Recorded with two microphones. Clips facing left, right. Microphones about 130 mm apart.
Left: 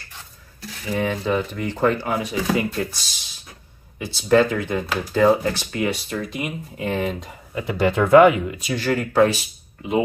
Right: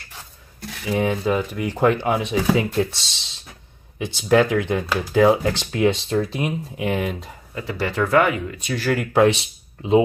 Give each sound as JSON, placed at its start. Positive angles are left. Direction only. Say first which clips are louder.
{"t": 0.9, "sound": "speech", "louder": "right 1 dB", "side_deg": -10}
{"t": 4.0, "sound": "speech", "louder": "even", "side_deg": -15}
{"t": 6.8, "sound": "speech", "louder": "even", "side_deg": -10}
{"t": 7.5, "sound": "speech", "louder": "left 4 dB", "side_deg": 20}
{"t": 8.6, "sound": "speech", "louder": "right 1 dB", "side_deg": 0}
{"t": 9.4, "sound": "speech", "louder": "right 2 dB", "side_deg": -25}